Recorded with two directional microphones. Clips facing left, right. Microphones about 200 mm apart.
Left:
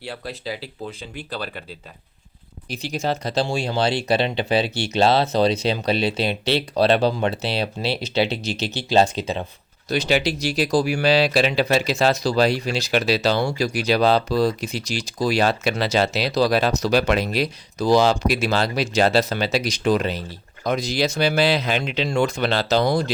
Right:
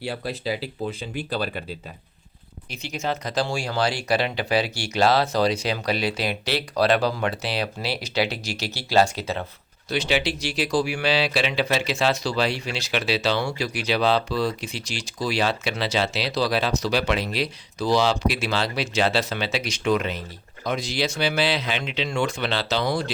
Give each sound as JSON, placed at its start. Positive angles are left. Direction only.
{"t": 0.0, "sound": "speech", "side_deg": -10}
{"t": 2.6, "sound": "speech", "side_deg": 35}
{"t": 9.9, "sound": "speech", "side_deg": 40}